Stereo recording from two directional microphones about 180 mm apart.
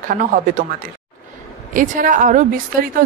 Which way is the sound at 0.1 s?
50° right (ahead or behind).